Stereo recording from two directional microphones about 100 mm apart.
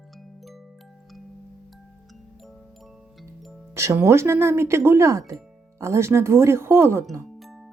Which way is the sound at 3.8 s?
30° right (ahead or behind).